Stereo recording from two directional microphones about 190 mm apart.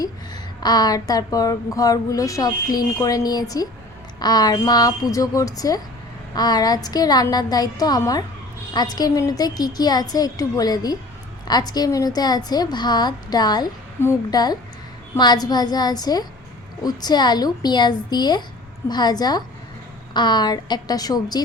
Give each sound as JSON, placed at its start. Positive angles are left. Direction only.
{"t": 0.6, "sound": "a woman's voice", "side_deg": 20}